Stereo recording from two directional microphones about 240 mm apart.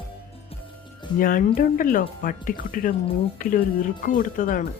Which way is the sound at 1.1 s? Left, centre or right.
Left.